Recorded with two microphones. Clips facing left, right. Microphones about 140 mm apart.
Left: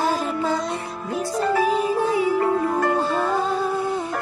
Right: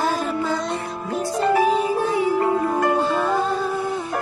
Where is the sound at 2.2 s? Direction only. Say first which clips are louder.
Even; 20° right (ahead or behind).